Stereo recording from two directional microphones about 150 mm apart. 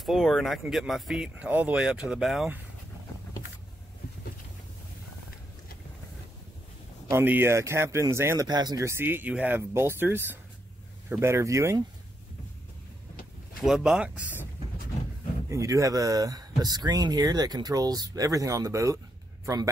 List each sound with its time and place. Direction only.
0.0 s speech: centre (ahead or behind)
7.1 s speech: 15° right (ahead or behind)
13.6 s speech: 5° right (ahead or behind)
15.5 s a man's voice: 20° right (ahead or behind)